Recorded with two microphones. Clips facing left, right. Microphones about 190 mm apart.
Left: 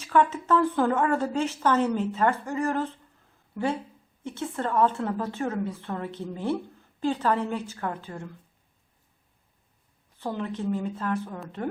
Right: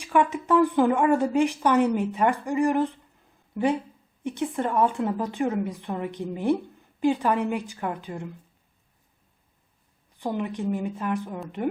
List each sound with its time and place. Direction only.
0.0 s a woman's voice: 15° right (ahead or behind)
10.2 s a woman's voice: 15° right (ahead or behind)